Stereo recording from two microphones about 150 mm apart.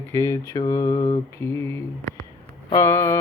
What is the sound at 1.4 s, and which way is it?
Speech, 15° left (ahead or behind).